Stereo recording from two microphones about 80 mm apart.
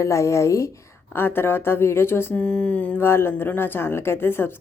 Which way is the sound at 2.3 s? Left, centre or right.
Centre.